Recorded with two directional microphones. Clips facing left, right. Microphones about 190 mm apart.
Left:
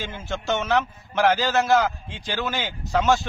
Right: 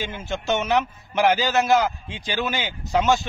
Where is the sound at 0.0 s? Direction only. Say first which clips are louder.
Right 2 dB; 20° right (ahead or behind).